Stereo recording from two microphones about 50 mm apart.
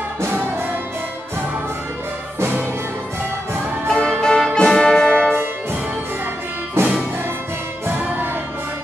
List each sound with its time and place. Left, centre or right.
3.8 s music: centre
6.8 s music: right
8.0 s music: right